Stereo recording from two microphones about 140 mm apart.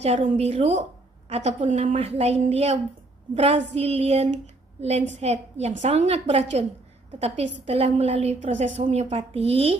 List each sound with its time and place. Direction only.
0.0 s a woman's voice: 50° right (ahead or behind)